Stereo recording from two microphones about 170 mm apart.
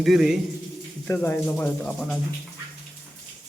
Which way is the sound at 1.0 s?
15° left (ahead or behind).